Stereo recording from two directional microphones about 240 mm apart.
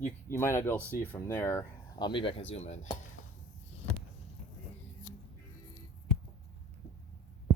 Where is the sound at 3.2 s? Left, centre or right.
Left.